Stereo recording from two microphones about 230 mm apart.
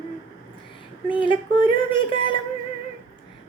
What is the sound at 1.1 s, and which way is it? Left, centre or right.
Speech, left.